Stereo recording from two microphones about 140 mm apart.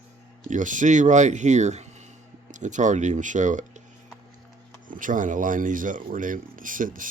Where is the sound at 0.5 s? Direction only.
65° right (ahead or behind).